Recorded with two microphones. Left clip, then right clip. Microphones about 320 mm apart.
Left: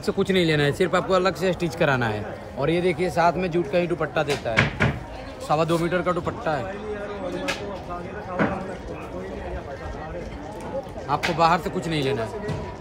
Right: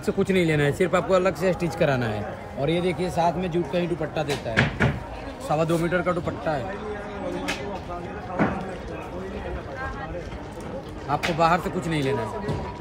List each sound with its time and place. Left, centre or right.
0.0 s speech: centre
2.0 s a man's voice: centre
4.6 s speech: centre
8.4 s a sound: centre
11.1 s speech: centre